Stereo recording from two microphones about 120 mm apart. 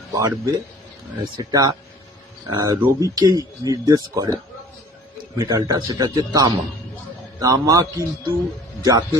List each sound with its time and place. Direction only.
0.1 s speech: 30° right (ahead or behind)
5.4 s speech: 30° right (ahead or behind)